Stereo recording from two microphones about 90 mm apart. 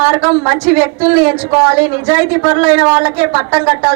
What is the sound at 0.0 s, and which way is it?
A woman's voice, 20° right (ahead or behind).